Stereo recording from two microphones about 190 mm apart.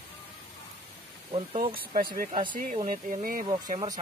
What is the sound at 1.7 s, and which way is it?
Speech, 45° right (ahead or behind).